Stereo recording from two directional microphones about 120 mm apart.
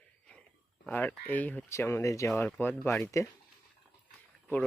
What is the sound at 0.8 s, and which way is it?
Speech, 15° left (ahead or behind).